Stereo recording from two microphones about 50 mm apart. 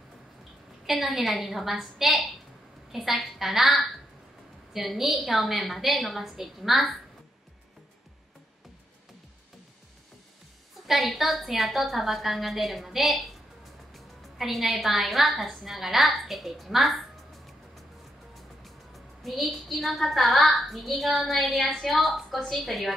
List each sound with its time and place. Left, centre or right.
0.8 s a woman's voice: centre
10.9 s a woman's voice: centre
18.6 s a woman's voice: centre